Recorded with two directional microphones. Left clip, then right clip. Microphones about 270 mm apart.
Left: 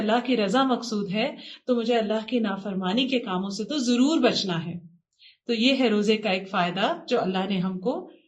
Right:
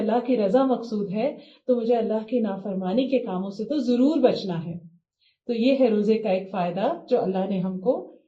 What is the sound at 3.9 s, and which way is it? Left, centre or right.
Speech, left.